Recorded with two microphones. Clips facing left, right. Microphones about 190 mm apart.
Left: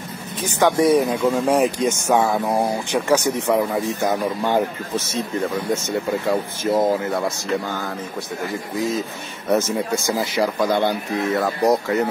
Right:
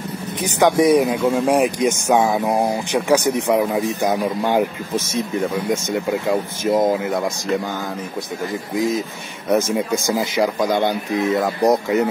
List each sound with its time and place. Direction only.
0.4 s speech: 15° right (ahead or behind)
8.7 s speech: 15° right (ahead or behind)